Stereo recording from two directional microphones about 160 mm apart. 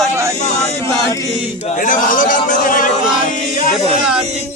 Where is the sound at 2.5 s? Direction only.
60° left (ahead or behind).